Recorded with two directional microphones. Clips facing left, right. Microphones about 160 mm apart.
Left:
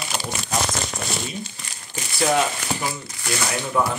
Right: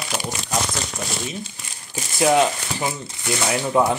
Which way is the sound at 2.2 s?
20° right (ahead or behind).